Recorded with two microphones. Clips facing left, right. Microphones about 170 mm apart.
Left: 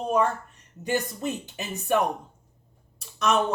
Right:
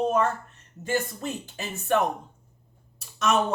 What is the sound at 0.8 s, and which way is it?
Speech, 15° left (ahead or behind).